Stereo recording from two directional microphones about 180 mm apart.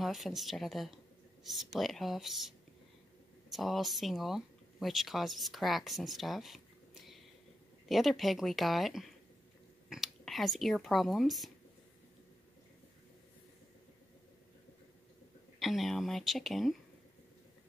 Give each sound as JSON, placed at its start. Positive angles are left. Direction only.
{"t": 0.0, "sound": "speech", "side_deg": 0}
{"t": 15.6, "sound": "speech", "side_deg": 0}